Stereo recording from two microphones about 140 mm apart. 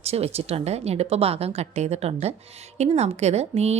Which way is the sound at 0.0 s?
50° right (ahead or behind).